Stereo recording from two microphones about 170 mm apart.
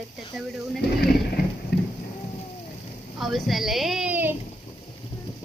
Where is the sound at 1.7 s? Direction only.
70° left (ahead or behind).